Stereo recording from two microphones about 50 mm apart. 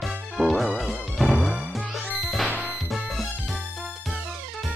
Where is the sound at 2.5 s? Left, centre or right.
Right.